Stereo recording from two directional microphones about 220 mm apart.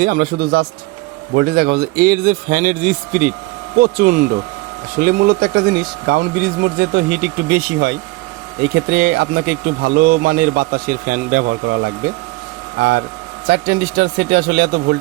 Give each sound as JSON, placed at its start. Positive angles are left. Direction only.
{"t": 0.0, "sound": "a man's voice", "side_deg": -45}